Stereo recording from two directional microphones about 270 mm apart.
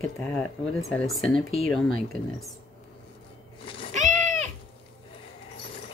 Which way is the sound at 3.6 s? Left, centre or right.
Centre.